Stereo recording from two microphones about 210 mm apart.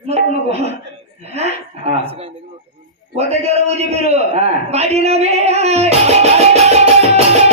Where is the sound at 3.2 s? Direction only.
30° right (ahead or behind).